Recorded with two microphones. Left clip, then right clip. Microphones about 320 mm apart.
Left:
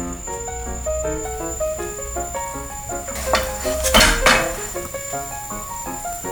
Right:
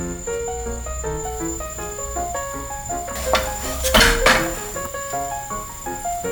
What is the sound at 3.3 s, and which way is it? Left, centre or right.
Music, centre.